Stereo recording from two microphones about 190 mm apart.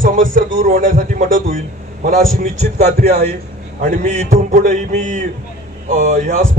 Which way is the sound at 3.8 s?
40° right (ahead or behind).